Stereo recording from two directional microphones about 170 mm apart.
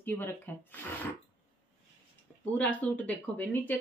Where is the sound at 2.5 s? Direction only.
10° left (ahead or behind).